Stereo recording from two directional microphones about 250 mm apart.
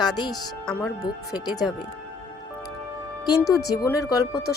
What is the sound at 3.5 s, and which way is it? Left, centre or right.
Speech, centre.